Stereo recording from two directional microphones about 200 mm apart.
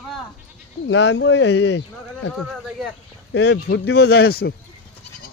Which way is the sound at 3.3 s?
60° left (ahead or behind).